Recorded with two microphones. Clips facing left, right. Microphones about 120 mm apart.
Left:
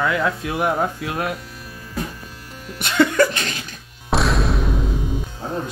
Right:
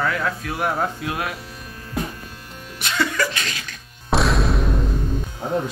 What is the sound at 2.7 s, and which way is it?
Cough, 50° left (ahead or behind).